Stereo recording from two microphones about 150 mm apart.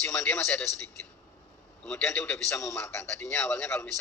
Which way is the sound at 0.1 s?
15° left (ahead or behind).